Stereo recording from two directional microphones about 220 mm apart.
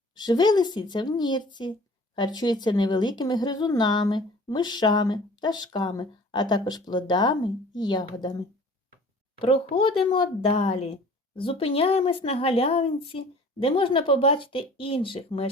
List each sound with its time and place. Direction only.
0.1 s a woman's voice: 20° left (ahead or behind)